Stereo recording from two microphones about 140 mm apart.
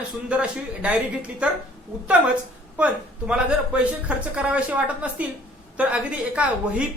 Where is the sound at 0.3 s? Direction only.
10° right (ahead or behind).